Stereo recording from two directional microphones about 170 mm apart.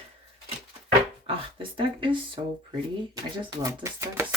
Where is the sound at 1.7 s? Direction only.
30° right (ahead or behind).